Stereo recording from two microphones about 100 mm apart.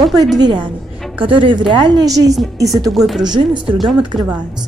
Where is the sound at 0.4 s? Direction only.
55° right (ahead or behind); by 2.3 s 40° right (ahead or behind).